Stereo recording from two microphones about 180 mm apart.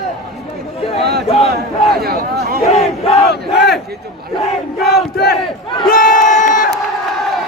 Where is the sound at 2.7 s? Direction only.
35° left (ahead or behind).